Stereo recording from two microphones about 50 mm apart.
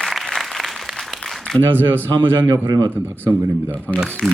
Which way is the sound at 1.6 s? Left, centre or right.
Right.